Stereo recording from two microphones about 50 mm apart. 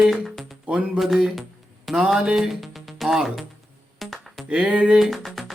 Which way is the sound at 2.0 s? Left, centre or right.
Centre.